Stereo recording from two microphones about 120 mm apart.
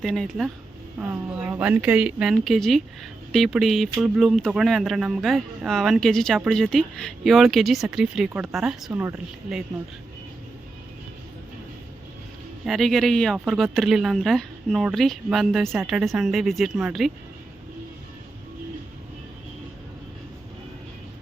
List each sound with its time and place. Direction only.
0.0 s speech: centre (ahead or behind)
0.9 s speech: 15° right (ahead or behind)
8.9 s speech: 20° right (ahead or behind)
9.1 s speech: 5° right (ahead or behind)
12.6 s speech: centre (ahead or behind)